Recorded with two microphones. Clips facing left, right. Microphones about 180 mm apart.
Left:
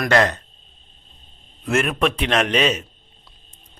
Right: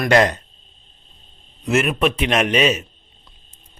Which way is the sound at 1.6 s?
5° right (ahead or behind).